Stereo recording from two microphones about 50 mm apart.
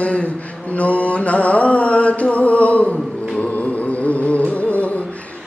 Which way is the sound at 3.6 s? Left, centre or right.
Left.